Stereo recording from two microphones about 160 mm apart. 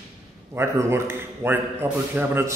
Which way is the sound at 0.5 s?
15° right (ahead or behind).